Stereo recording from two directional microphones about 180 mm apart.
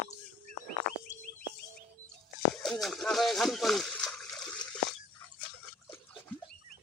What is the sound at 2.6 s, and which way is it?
Water, centre (ahead or behind).